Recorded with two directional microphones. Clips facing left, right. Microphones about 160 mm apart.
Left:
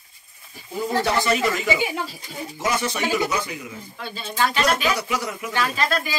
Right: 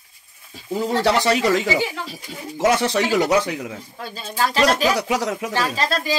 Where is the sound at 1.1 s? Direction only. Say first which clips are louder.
Right 4 dB; 85° right.